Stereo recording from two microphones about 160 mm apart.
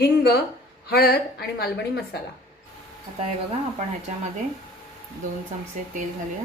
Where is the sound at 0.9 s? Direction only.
75° left (ahead or behind).